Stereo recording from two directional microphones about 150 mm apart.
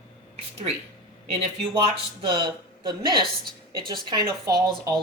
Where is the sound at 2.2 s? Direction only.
30° right (ahead or behind).